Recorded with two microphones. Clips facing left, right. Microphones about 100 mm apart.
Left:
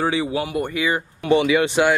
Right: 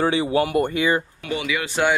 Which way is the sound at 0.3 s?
50° right (ahead or behind).